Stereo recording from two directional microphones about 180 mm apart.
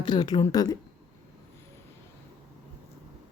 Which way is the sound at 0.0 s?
25° left (ahead or behind).